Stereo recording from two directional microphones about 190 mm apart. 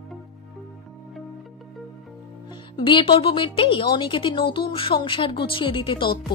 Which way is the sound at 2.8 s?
25° left (ahead or behind).